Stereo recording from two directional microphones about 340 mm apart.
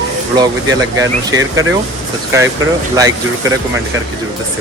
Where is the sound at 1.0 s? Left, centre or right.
Centre.